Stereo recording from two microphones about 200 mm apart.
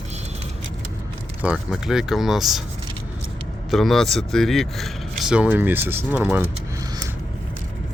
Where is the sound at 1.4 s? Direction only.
5° right (ahead or behind).